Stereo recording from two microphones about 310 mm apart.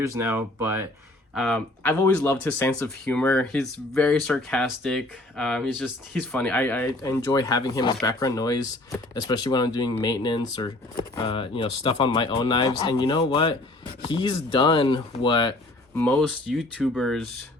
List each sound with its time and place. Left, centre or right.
0.2 s speech: centre
16.0 s speech: centre